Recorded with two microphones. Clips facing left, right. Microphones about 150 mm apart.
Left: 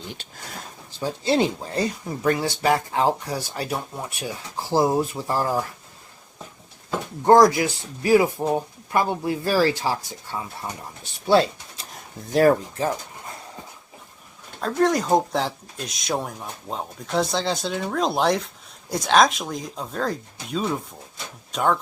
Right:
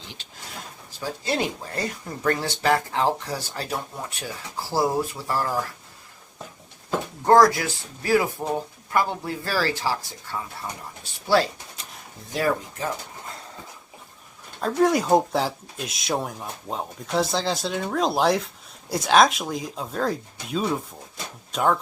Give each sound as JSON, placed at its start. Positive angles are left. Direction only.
{"t": 0.9, "sound": "speech", "side_deg": 25}
{"t": 7.3, "sound": "speech", "side_deg": 20}
{"t": 12.3, "sound": "speech", "side_deg": 45}
{"t": 14.6, "sound": "speech", "side_deg": -5}